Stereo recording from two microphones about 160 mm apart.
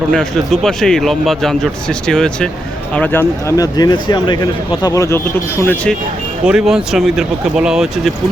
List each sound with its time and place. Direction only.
0.1 s a man's voice: 5° left (ahead or behind)
6.4 s a man's voice: 5° right (ahead or behind)